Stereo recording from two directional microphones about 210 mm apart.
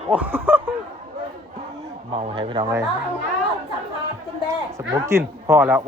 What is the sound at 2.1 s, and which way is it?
Speech, 25° right (ahead or behind).